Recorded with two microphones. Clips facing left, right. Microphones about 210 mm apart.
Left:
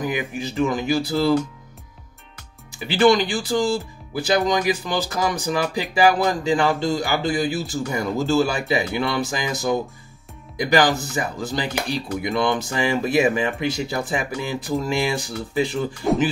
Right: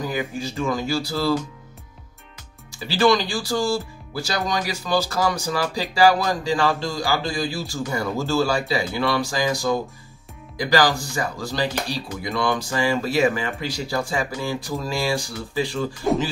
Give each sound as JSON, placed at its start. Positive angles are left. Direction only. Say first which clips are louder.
{"t": 0.0, "sound": "speech", "louder": "left 1 dB", "side_deg": 20}
{"t": 2.8, "sound": "speech", "louder": "left 2 dB", "side_deg": 20}
{"t": 16.0, "sound": "speech", "louder": "even", "side_deg": 0}